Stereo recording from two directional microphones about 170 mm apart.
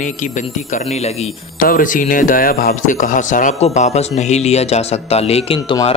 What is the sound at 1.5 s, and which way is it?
Speech, 55° left (ahead or behind).